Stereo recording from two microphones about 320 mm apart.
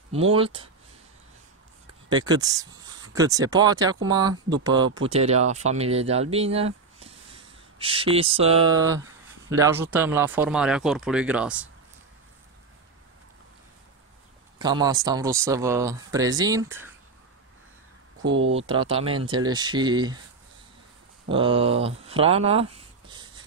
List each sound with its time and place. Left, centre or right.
0.3 s speech: centre
2.0 s speech: centre
14.6 s speech: centre
18.2 s speech: right
18.6 s speech: centre
21.3 s speech: centre